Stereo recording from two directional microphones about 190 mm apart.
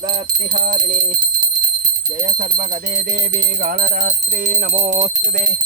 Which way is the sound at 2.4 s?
45° right (ahead or behind).